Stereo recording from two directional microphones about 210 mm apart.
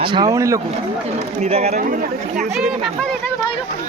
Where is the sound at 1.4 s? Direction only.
30° right (ahead or behind).